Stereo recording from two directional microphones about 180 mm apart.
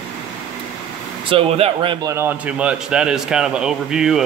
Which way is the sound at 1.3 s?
30° right (ahead or behind).